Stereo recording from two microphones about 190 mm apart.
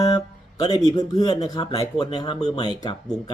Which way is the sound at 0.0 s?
20° left (ahead or behind).